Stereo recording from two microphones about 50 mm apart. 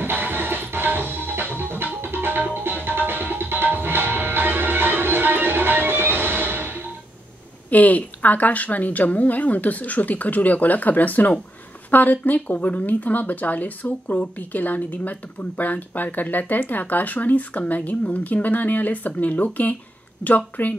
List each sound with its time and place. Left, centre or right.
0.0 s music: right
7.7 s speech: left